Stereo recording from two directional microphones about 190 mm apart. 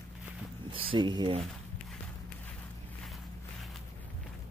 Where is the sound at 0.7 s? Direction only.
25° right (ahead or behind).